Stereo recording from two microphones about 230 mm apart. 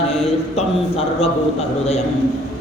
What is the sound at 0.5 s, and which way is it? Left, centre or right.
Speech, left.